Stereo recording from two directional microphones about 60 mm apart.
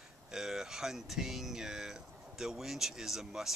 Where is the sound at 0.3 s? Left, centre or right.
Centre.